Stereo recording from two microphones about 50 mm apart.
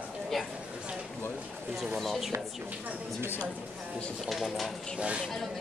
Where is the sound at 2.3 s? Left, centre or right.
Right.